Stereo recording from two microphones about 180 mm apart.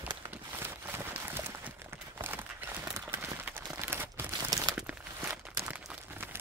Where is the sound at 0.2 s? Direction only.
10° right (ahead or behind).